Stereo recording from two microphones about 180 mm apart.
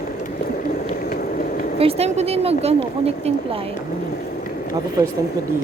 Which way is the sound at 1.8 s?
35° right (ahead or behind).